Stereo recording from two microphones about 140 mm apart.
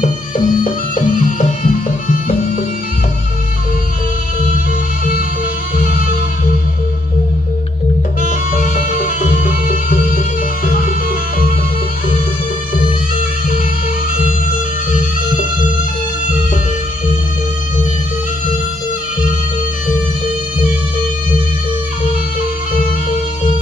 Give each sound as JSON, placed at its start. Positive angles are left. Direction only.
{"t": 0.0, "sound": "music", "side_deg": 70}
{"t": 8.2, "sound": "music", "side_deg": 70}